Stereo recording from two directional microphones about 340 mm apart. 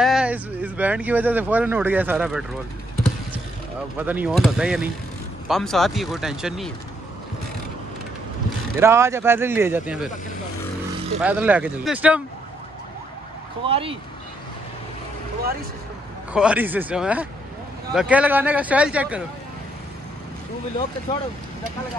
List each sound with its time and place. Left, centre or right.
0.0 s speech: centre
4.0 s speech: centre
8.7 s speech: centre
11.1 s speech: centre
13.7 s speech: centre
16.3 s speech: centre